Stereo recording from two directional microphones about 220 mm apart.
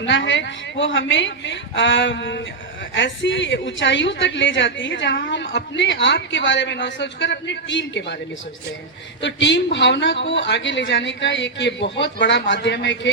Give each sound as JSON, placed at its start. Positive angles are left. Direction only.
{"t": 0.0, "sound": "a woman's voice", "side_deg": 55}
{"t": 9.2, "sound": "a man's voice", "side_deg": 55}